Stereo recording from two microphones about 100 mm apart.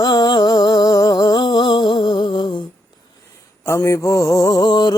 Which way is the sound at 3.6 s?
30° left (ahead or behind).